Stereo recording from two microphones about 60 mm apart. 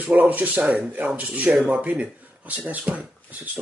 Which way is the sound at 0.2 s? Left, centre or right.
Right.